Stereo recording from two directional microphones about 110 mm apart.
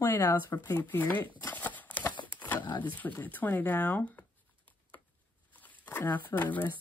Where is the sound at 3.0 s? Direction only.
15° left (ahead or behind).